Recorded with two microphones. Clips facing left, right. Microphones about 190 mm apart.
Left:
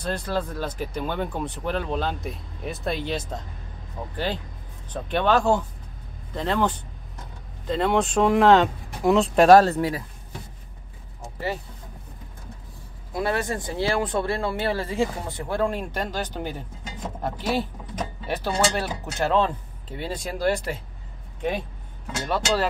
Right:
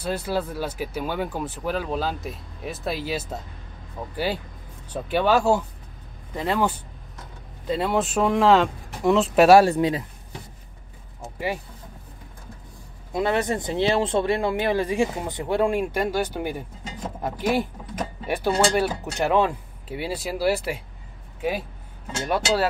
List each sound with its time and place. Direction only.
0.0 s speech: 10° right (ahead or behind)
4.9 s speech: 5° right (ahead or behind)
11.3 s speech: 10° right (ahead or behind)
13.1 s speech: 20° right (ahead or behind); by 21.6 s 5° right (ahead or behind)